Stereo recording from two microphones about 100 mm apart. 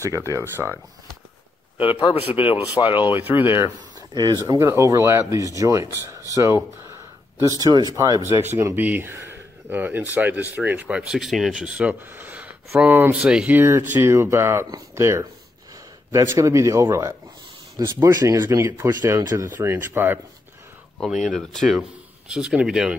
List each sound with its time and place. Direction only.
0.3 s speech: 25° right (ahead or behind)
2.1 s speech: 15° right (ahead or behind)
2.8 s speech: 55° left (ahead or behind)
3.2 s speech: 20° right (ahead or behind)
4.1 s a man's voice: 45° right (ahead or behind)
4.6 s a man's voice: 30° right (ahead or behind)
6.3 s a sound: 30° right (ahead or behind)
7.6 s speech: 45° right (ahead or behind)
7.9 s speech: 30° right (ahead or behind)
11.0 s speech: 5° right (ahead or behind); by 13.2 s 20° right (ahead or behind)
13.2 s speech: 10° right (ahead or behind)
13.6 s a man's voice: 25° right (ahead or behind)
21.0 s speech: centre (ahead or behind)